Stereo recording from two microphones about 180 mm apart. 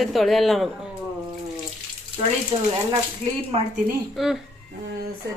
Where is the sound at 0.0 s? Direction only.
Centre (ahead or behind).